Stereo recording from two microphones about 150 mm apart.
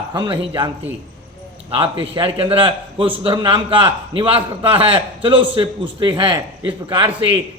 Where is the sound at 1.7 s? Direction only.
35° right (ahead or behind).